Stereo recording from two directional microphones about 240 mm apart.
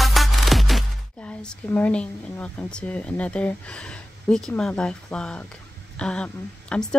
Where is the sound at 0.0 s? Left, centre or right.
Centre.